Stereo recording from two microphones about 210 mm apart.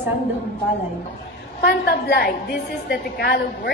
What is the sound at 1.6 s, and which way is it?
A woman's voice, 50° left (ahead or behind).